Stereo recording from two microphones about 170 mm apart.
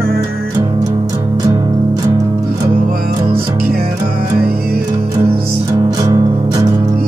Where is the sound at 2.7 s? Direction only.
55° right (ahead or behind).